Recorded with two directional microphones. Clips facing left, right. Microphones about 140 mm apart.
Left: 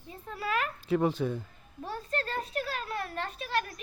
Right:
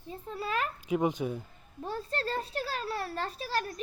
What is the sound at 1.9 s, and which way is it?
A child's voice, 30° right (ahead or behind).